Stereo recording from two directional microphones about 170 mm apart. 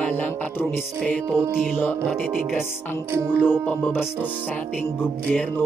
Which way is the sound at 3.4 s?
10° left (ahead or behind).